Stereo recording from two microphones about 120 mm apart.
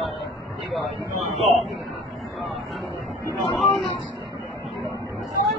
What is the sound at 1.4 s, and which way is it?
Speech, centre (ahead or behind).